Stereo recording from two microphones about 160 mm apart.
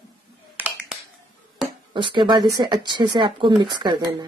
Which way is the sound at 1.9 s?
30° right (ahead or behind).